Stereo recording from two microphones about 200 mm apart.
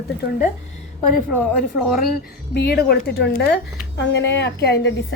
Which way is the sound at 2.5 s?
50° left (ahead or behind).